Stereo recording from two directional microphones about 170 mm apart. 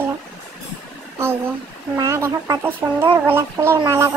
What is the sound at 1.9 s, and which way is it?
Speech, 20° right (ahead or behind).